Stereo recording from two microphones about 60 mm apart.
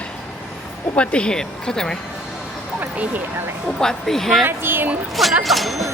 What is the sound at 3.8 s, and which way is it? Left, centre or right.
Speech, centre.